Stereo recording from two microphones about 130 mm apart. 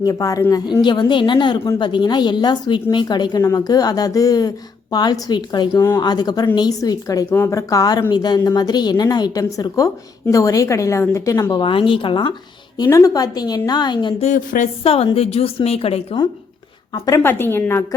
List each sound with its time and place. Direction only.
0.0 s a woman's voice: 25° left (ahead or behind)
11.6 s a woman's voice: 40° left (ahead or behind)
12.7 s a woman's voice: 30° left (ahead or behind)
14.2 s a woman's voice: 80° left
14.8 s a woman's voice: 45° left (ahead or behind)
17.2 s a woman's voice: 15° left (ahead or behind)